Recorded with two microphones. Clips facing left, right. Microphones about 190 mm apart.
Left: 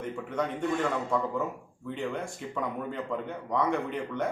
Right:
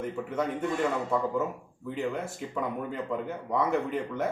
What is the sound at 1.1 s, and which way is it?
Speech, 5° right (ahead or behind).